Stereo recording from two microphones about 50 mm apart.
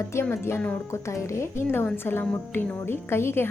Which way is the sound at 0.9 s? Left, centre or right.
Left.